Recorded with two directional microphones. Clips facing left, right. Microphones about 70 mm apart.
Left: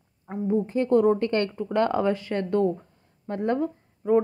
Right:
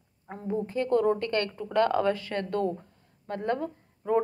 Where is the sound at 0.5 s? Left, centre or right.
Left.